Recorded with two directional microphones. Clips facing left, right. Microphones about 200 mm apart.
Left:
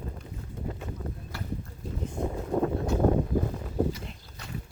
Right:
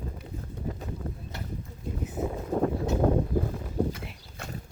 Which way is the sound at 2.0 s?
5° right (ahead or behind).